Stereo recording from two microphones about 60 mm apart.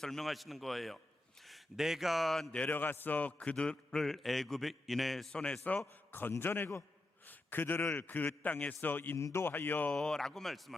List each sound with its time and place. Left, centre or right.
0.0 s a man's voice: centre
2.6 s a man's voice: left; by 5.3 s centre
5.3 s a man's voice: centre
6.4 s a man's voice: left
9.1 s speech: left
9.5 s a man's voice: left
9.9 s speech: centre